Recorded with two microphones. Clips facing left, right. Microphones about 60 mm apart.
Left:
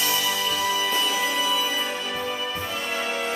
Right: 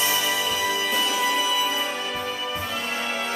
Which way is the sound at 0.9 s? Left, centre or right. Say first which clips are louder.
Right 1 dB; centre.